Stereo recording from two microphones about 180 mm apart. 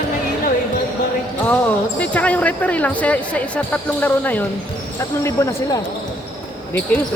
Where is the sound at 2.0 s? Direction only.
10° left (ahead or behind).